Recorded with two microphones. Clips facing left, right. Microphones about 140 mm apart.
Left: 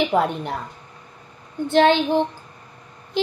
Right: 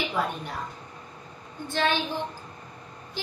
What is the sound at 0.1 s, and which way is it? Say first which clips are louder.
Speech: left 8 dB; 55° left (ahead or behind).